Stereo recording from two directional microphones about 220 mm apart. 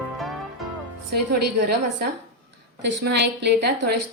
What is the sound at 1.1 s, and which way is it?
A woman's voice, 45° right (ahead or behind).